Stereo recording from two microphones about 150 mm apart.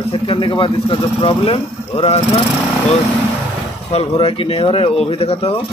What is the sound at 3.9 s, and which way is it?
Speech, 40° left (ahead or behind).